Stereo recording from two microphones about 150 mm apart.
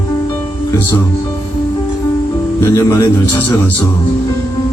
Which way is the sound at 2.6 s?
20° left (ahead or behind).